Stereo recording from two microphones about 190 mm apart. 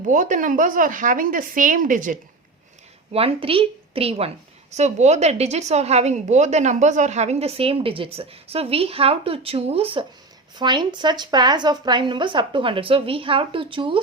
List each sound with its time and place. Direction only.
0.1 s a woman's voice: 45° right (ahead or behind)
3.1 s a woman's voice: 30° right (ahead or behind)